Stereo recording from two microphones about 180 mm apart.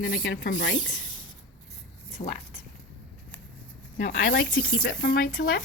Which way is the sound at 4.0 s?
50° left (ahead or behind).